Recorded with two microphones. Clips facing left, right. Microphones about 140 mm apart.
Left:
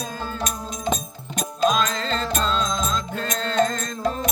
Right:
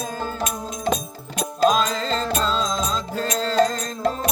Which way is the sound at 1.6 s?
40° right (ahead or behind).